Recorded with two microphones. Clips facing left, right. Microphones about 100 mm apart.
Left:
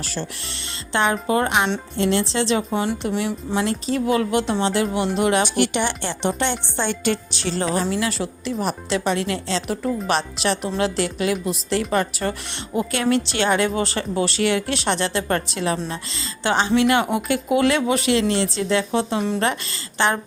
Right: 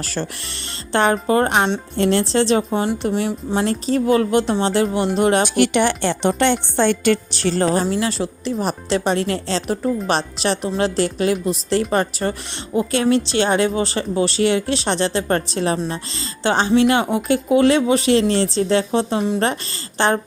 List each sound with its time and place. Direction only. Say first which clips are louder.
0.0 s a woman's voice: right 3 dB; 50° right (ahead or behind); by 5.4 s 35° right (ahead or behind)
5.4 s a woman's voice: right 4 dB; 55° right (ahead or behind); by 20.1 s 35° right (ahead or behind)